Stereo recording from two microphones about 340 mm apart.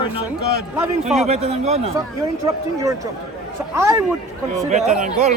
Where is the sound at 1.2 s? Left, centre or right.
Centre.